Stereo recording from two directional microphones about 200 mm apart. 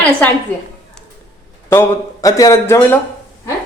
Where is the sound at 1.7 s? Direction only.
15° left (ahead or behind).